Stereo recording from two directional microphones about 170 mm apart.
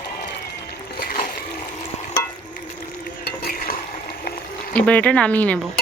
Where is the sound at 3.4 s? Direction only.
55° left (ahead or behind).